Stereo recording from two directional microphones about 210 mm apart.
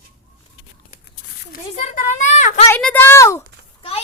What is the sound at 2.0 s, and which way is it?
Speech, 35° left (ahead or behind).